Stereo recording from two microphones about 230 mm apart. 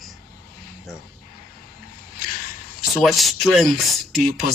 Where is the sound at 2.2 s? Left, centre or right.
Left.